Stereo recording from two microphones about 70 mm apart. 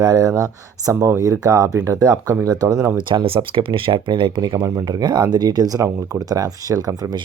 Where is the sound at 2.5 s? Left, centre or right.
Right.